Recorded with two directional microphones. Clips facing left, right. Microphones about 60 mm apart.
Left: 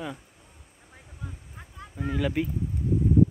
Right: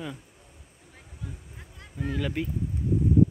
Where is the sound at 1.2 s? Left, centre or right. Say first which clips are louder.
Even; left.